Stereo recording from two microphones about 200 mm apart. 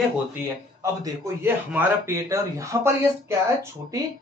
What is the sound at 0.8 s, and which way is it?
A man's voice, 15° right (ahead or behind).